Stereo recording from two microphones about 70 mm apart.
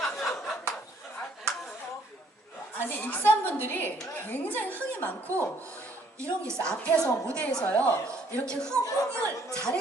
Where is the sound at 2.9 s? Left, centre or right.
Left.